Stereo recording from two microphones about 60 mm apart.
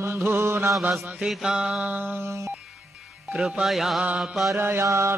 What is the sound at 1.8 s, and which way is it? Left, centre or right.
Music, right.